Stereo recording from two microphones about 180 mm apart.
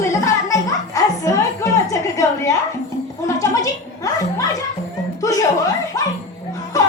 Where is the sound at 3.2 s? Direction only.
20° left (ahead or behind).